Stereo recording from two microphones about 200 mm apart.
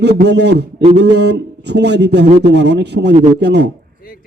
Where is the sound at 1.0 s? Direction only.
55° right (ahead or behind).